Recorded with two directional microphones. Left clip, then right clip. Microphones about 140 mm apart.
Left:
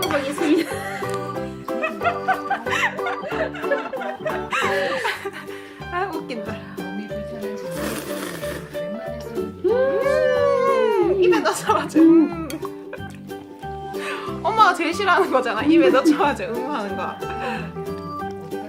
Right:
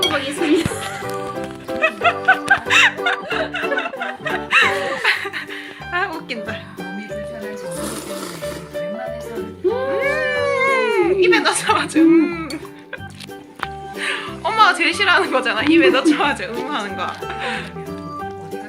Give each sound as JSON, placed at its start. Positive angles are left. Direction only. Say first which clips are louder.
{"t": 0.0, "sound": "music", "louder": "right 3 dB", "side_deg": 0}
{"t": 8.7, "sound": "music", "louder": "right 3 dB", "side_deg": 0}
{"t": 10.0, "sound": "cat", "louder": "left 1 dB", "side_deg": 0}
{"t": 14.0, "sound": "a woman's voice", "louder": "right 3 dB", "side_deg": 5}